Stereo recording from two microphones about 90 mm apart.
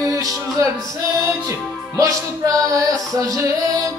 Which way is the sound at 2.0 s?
40° right (ahead or behind).